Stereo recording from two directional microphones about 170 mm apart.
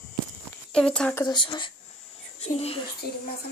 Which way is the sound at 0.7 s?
5° left (ahead or behind).